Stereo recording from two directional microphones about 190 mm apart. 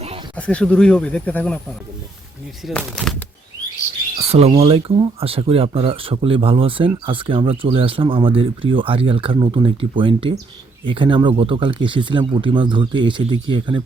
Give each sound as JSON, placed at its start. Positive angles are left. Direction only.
{"t": 0.3, "sound": "speech", "side_deg": 5}
{"t": 2.6, "sound": "speech", "side_deg": 5}
{"t": 4.2, "sound": "speech", "side_deg": -35}